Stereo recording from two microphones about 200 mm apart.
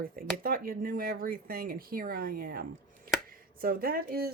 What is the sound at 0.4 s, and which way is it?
Speech, 45° right (ahead or behind).